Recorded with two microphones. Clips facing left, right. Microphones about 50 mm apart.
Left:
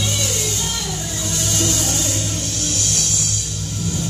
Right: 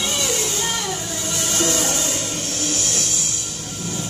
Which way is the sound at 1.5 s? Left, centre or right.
Right.